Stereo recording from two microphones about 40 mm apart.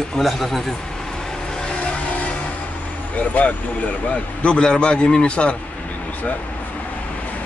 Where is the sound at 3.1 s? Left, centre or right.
Left.